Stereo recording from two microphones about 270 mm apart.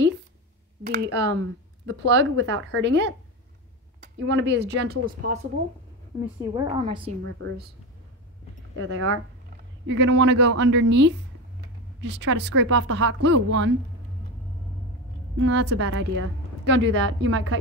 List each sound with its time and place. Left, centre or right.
0.8 s speech: right
6.2 s a woman's voice: centre
7.2 s speech: right
8.7 s a woman's voice: right
9.8 s speech: right
15.3 s a woman's voice: right